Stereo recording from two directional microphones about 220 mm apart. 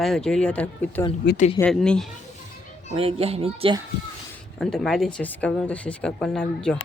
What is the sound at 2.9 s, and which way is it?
Speech, 25° right (ahead or behind).